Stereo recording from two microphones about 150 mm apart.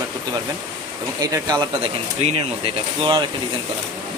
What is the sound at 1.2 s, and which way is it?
Speech, 25° right (ahead or behind).